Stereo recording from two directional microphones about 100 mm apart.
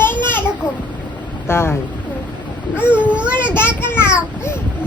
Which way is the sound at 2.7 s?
15° right (ahead or behind).